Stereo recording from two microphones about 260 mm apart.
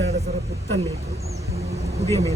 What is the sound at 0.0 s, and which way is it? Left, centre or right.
Music, right.